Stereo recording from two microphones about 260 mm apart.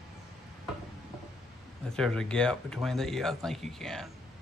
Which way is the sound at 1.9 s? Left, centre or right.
Centre.